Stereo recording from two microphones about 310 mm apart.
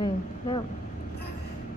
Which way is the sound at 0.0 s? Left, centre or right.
Centre.